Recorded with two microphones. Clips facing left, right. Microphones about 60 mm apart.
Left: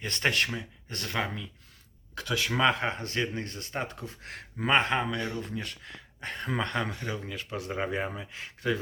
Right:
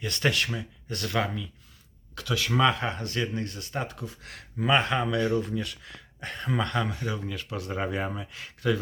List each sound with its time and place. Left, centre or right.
0.0 s speech: left
5.5 s speech: left
6.2 s speech: left